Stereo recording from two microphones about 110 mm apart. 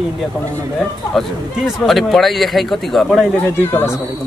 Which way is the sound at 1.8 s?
Centre (ahead or behind).